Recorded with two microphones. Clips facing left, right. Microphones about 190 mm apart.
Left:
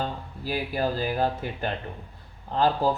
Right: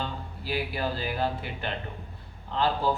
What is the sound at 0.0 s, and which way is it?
A man's voice, 45° left (ahead or behind).